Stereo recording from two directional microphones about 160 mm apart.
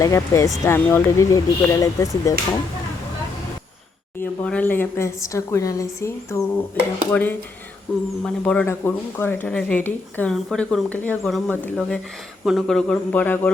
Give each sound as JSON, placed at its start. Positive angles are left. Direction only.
{"t": 0.0, "sound": "speech", "side_deg": 20}
{"t": 4.2, "sound": "a man's voice", "side_deg": 10}